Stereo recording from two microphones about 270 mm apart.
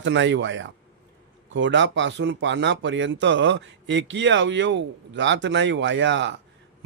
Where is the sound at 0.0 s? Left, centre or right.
Right.